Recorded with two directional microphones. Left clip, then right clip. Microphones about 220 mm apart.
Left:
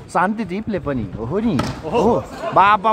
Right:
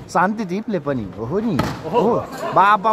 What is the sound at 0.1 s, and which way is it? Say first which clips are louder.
Speech: even; 20° left (ahead or behind).